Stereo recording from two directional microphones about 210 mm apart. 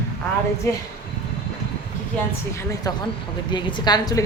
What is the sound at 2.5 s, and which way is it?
A woman's voice, 15° left (ahead or behind).